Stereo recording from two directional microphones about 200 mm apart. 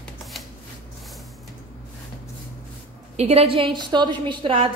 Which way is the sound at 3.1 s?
30° right (ahead or behind).